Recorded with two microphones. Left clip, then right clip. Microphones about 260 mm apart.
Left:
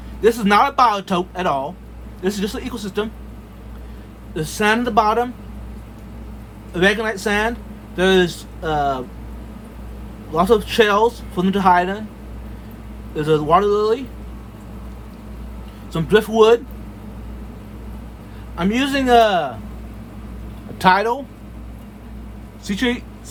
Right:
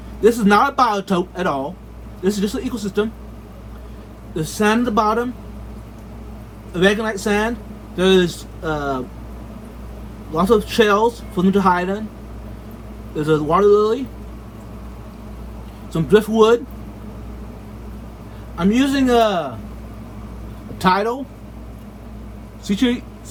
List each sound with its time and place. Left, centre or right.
0.2 s speech: left
4.4 s speech: left
6.7 s speech: left
10.3 s speech: left
13.1 s speech: left
15.9 s speech: left
18.5 s speech: left
20.7 s speech: left
22.6 s speech: left